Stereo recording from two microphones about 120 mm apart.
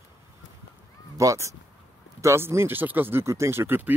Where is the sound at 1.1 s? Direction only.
25° right (ahead or behind).